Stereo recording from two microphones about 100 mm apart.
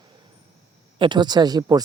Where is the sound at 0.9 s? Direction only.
50° right (ahead or behind).